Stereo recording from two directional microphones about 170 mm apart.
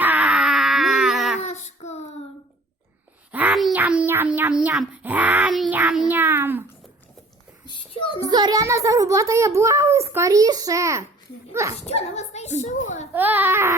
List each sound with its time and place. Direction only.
0.0 s a sound: 10° right (ahead or behind)
1.5 s child singing: 40° left (ahead or behind)
3.3 s a child's voice: 5° right (ahead or behind)
7.6 s a sound: 30° left (ahead or behind)
8.2 s a child's voice: 25° right (ahead or behind)
11.8 s speech: 40° left (ahead or behind)
13.1 s a child's voice: 10° right (ahead or behind)